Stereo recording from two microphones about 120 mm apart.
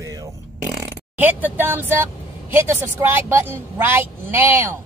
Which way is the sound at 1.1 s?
15° right (ahead or behind).